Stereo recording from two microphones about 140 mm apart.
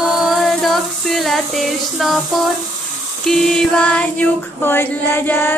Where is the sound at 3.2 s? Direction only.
5° left (ahead or behind).